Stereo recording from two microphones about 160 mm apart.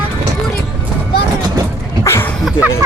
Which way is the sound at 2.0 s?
15° left (ahead or behind).